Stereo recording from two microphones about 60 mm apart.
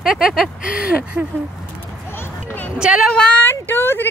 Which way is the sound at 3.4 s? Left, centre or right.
Left.